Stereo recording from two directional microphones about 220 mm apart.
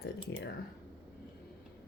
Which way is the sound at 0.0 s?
50° left (ahead or behind).